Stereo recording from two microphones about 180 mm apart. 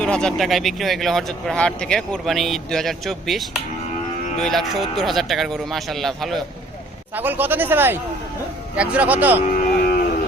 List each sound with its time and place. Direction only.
0.0 s speech: 5° left (ahead or behind)
7.2 s speech: 10° right (ahead or behind)
9.7 s cattle: 55° left (ahead or behind)